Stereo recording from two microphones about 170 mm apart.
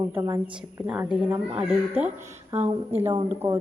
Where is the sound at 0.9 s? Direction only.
5° right (ahead or behind).